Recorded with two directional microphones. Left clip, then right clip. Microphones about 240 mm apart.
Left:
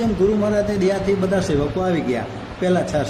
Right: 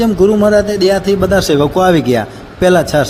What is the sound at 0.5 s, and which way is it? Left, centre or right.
Speech, right.